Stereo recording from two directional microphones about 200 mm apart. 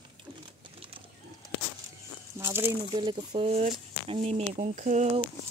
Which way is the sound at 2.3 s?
15° right (ahead or behind).